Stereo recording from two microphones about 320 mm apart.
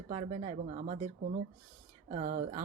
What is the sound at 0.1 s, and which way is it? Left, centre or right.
Speech, right.